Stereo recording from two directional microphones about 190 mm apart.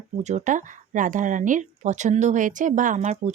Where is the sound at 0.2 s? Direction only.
35° right (ahead or behind).